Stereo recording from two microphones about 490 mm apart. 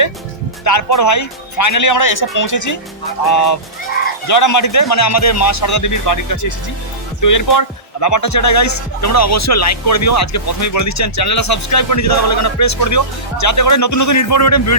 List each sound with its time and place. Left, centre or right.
0.6 s speech: left